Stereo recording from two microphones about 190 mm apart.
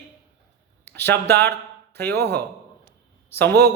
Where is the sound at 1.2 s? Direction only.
10° left (ahead or behind).